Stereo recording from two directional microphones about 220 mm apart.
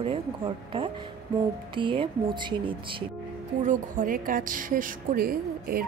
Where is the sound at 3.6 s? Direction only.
35° right (ahead or behind).